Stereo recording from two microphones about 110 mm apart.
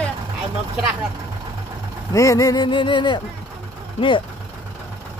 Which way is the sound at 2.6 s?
45° left (ahead or behind).